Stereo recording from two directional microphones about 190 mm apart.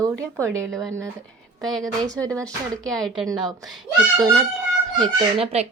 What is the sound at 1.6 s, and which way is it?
Speech, centre (ahead or behind).